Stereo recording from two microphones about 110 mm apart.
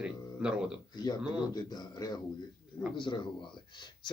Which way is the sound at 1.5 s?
40° left (ahead or behind).